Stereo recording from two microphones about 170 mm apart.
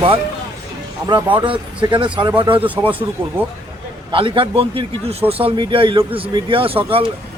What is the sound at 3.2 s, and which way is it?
Speech, 15° right (ahead or behind).